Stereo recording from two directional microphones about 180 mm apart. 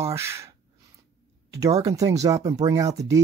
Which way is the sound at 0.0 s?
15° right (ahead or behind).